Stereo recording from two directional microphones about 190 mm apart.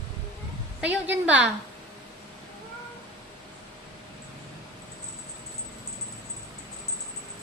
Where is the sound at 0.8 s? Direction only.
10° right (ahead or behind).